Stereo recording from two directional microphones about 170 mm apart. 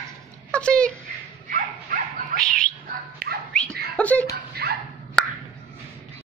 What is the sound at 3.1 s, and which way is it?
Dog, 65° right (ahead or behind).